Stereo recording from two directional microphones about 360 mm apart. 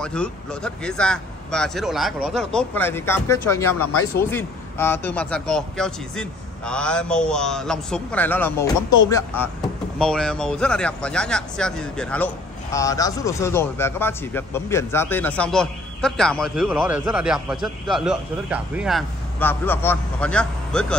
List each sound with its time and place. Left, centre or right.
0.0 s a man's voice: centre
3.6 s speech: left
4.2 s a man's voice: centre